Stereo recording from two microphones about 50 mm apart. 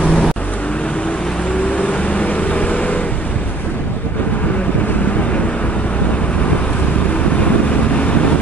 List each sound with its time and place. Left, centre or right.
0.0 s vehicle: centre
1.8 s vehicle: left